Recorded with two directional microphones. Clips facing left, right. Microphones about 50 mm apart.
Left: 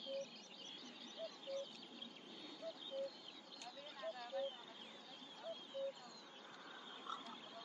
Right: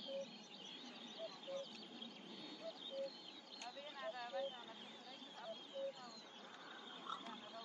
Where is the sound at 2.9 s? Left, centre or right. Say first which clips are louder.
Left 1 dB; centre.